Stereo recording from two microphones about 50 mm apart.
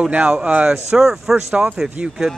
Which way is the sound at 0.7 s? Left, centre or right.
Centre.